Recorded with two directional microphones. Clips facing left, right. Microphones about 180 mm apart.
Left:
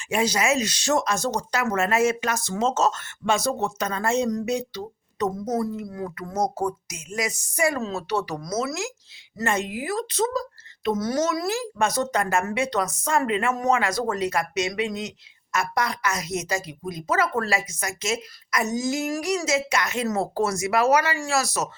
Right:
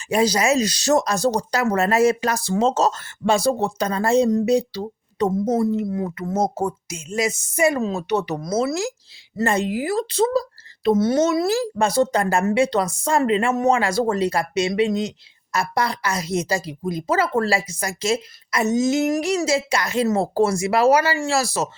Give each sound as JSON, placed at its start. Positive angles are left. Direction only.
{"t": 0.1, "sound": "a woman's voice", "side_deg": -35}